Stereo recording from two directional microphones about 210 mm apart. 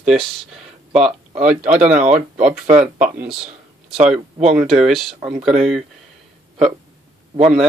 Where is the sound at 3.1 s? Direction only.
5° right (ahead or behind).